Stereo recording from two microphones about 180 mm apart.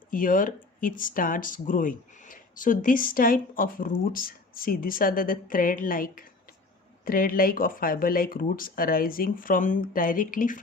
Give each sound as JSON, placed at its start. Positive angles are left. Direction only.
{"t": 0.1, "sound": "speech", "side_deg": 50}